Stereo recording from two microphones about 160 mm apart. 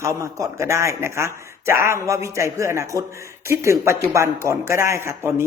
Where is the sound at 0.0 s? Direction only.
20° right (ahead or behind).